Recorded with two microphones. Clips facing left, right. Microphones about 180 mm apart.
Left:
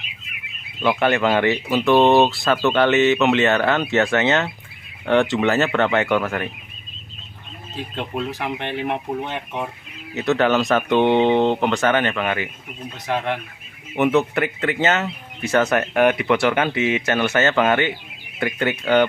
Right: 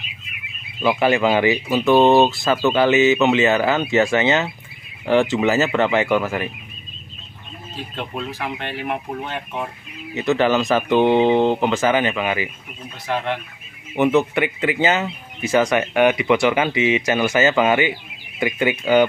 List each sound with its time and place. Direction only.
0.8 s speech: 5° right (ahead or behind)
7.7 s speech: 15° left (ahead or behind)
10.1 s speech: centre (ahead or behind)
13.0 s speech: 15° left (ahead or behind)
13.9 s speech: centre (ahead or behind)